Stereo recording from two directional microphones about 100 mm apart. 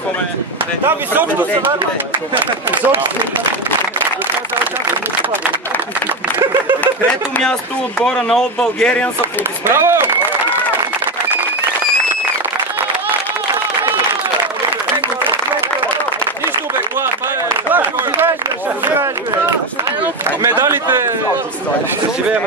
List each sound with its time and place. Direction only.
0.8 s speech: 20° right (ahead or behind)
8.0 s speech: 5° left (ahead or behind)
9.2 s speech: 25° right (ahead or behind)
17.7 s a sound: 20° right (ahead or behind)
20.2 s speech: 25° right (ahead or behind)